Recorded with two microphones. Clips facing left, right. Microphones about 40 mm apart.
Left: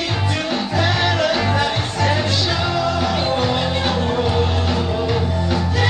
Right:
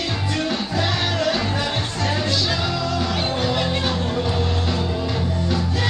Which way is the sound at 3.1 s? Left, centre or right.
Centre.